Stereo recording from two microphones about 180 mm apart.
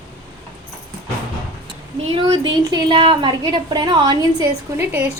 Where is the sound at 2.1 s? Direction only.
25° right (ahead or behind).